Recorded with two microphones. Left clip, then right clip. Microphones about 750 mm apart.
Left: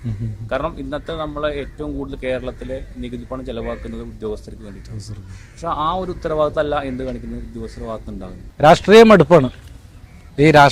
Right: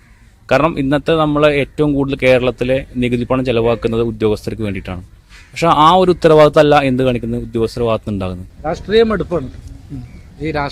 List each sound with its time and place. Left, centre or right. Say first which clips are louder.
0.4 s a man's voice: right 10 dB; right
8.7 s a man's voice: left 5 dB; left
10.4 s a man's voice: left 10 dB; left